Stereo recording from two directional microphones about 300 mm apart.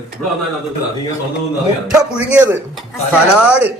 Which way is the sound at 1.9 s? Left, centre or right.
Centre.